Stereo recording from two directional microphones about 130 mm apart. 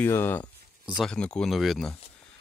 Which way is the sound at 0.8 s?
5° right (ahead or behind).